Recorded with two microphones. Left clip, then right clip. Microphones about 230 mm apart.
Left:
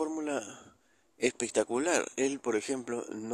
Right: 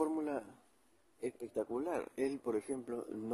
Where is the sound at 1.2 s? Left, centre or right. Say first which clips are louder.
Left 10 dB; left.